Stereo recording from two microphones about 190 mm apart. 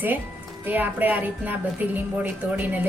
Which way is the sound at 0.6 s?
10° right (ahead or behind).